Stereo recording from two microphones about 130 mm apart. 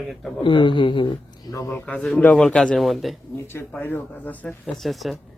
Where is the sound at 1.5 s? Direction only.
20° left (ahead or behind).